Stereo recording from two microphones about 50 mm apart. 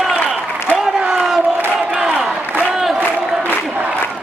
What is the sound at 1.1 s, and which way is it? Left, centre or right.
Crowd, centre.